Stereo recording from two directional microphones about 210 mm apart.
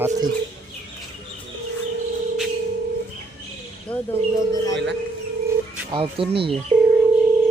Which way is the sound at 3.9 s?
5° left (ahead or behind).